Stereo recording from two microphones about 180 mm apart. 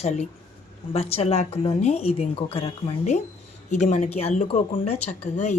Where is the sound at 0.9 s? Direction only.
35° left (ahead or behind).